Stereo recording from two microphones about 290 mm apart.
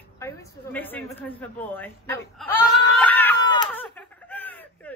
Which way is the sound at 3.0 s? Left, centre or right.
Centre.